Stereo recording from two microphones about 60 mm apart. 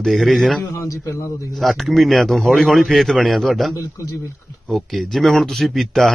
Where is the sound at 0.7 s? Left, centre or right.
Left.